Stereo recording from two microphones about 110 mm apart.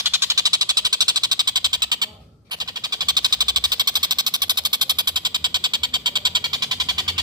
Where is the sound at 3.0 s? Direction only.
40° right (ahead or behind).